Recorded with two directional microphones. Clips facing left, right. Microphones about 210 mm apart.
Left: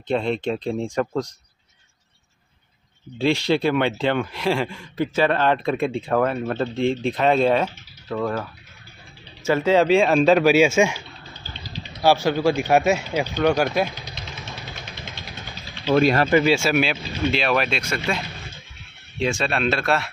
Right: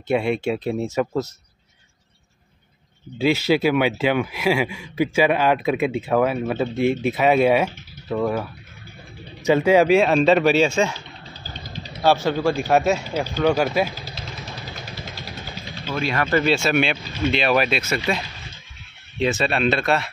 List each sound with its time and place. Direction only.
0.1 s speech: 10° right (ahead or behind)
3.2 s speech: 5° right (ahead or behind)
11.3 s vehicle: 40° right (ahead or behind)
12.0 s speech: 5° left (ahead or behind)
13.4 s vehicle: 5° right (ahead or behind)
15.9 s speech: 45° left (ahead or behind)
16.3 s speech: 10° left (ahead or behind)